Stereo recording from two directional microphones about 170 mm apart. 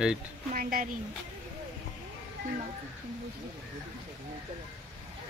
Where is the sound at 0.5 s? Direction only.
55° right (ahead or behind).